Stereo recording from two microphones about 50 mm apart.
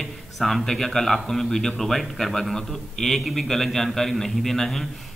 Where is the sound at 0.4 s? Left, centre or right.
Centre.